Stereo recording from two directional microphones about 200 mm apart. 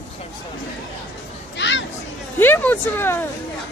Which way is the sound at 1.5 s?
65° left (ahead or behind).